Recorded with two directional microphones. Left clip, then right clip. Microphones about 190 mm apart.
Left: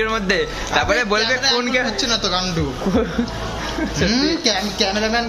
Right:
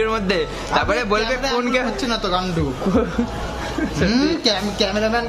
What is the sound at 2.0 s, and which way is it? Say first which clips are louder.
Speech: left 1 dB; 30° right (ahead or behind).